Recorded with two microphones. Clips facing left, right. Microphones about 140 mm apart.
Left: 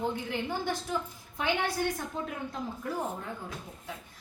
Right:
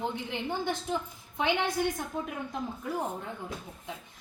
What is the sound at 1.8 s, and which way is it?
Speech, 15° right (ahead or behind).